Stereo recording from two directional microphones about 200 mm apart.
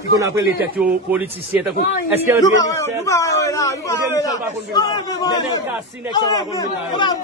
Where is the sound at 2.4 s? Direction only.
15° left (ahead or behind).